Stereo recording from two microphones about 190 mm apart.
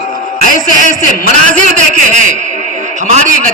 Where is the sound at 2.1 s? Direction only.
40° right (ahead or behind).